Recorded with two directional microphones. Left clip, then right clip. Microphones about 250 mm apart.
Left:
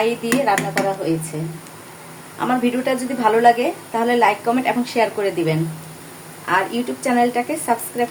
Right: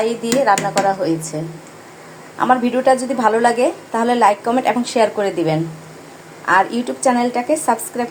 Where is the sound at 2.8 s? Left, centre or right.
Centre.